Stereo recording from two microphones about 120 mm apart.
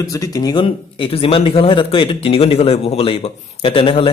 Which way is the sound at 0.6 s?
50° left (ahead or behind).